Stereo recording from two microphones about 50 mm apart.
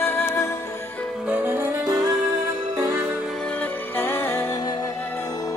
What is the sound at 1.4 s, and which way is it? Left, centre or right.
Music, right.